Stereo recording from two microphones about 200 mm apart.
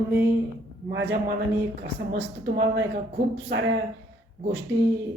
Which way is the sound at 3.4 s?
65° right (ahead or behind).